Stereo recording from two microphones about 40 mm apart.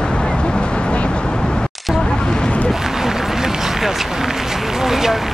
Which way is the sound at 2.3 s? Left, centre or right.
Left.